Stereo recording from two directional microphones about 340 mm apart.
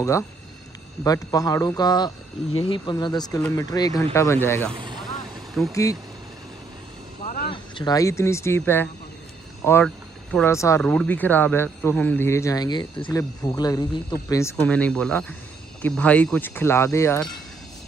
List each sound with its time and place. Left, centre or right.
1.0 s speech: centre
4.7 s vehicle: centre
5.5 s speech: centre
7.2 s cricket: left
7.5 s speech: centre